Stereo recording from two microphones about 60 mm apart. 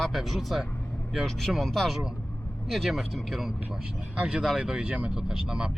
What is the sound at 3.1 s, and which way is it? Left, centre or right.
Speech, centre.